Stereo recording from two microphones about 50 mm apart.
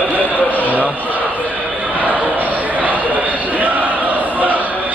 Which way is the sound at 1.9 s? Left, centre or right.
Right.